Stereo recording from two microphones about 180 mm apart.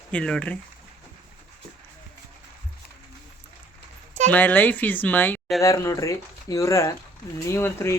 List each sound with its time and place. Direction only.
0.1 s speech: 5° left (ahead or behind)
4.3 s speech: 10° left (ahead or behind)